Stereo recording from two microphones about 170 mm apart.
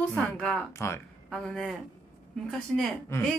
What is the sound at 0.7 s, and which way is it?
Speech, 15° left (ahead or behind).